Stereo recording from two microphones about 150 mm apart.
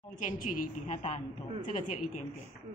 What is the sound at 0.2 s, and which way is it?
A woman's voice, 60° left (ahead or behind).